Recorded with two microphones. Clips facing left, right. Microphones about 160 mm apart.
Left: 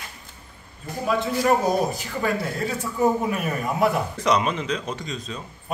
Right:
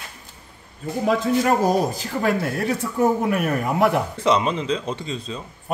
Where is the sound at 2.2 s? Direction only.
70° right (ahead or behind).